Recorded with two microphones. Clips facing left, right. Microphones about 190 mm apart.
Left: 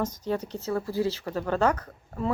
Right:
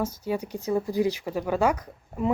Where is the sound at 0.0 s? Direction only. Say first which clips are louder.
Right 1 dB; 10° right (ahead or behind).